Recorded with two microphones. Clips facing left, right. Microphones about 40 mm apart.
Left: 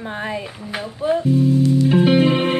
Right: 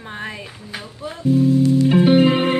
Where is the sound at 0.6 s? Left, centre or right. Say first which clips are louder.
Left 6 dB; centre.